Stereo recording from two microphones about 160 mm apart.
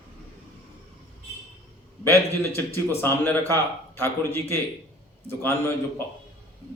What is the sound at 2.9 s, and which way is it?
A man's voice, 15° left (ahead or behind).